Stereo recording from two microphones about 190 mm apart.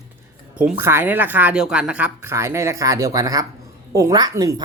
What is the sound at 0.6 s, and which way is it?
Speech, 10° right (ahead or behind).